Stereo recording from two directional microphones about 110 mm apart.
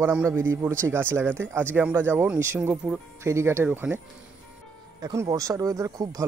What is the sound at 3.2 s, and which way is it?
Speech, 25° right (ahead or behind).